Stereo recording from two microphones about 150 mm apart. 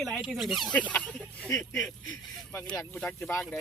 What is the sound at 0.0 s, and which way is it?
Speech, centre (ahead or behind).